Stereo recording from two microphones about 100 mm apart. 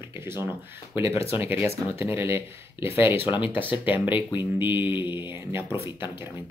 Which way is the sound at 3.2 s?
55° left (ahead or behind).